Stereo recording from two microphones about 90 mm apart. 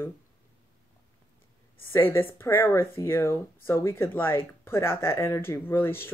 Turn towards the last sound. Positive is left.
turn(degrees=25)  # may be behind; listen again after turning